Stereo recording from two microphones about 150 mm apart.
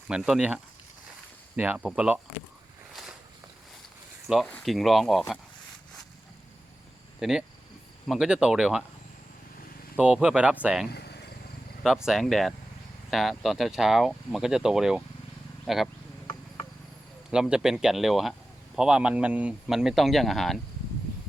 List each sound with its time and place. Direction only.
0.1 s speech: 5° right (ahead or behind)
2.9 s walk: centre (ahead or behind)
4.3 s speech: centre (ahead or behind)
7.2 s speech: 5° right (ahead or behind)
10.0 s speech: 5° right (ahead or behind)
10.9 s a sound: 90° left
11.8 s speech: 5° right (ahead or behind)
17.3 s speech: 5° right (ahead or behind)